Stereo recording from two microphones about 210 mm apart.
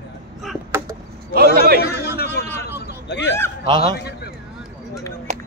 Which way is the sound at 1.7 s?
50° left (ahead or behind).